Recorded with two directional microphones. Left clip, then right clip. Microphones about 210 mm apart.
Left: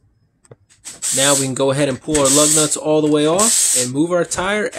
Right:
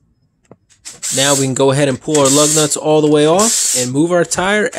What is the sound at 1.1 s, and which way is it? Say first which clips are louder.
Speech: right 3 dB; 25° right (ahead or behind).